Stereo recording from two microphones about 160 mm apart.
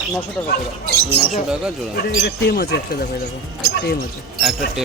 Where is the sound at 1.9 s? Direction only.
75° left (ahead or behind).